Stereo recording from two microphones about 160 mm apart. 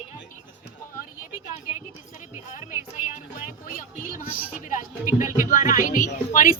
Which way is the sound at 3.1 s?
55° left (ahead or behind).